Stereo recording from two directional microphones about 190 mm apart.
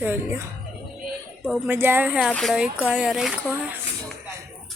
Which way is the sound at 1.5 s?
10° right (ahead or behind).